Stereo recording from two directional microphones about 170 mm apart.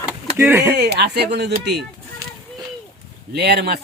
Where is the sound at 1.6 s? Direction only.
80° right.